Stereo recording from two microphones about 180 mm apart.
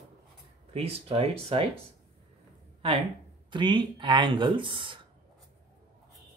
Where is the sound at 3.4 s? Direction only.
25° right (ahead or behind).